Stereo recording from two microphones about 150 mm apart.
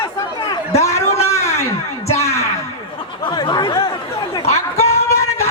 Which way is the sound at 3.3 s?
30° left (ahead or behind).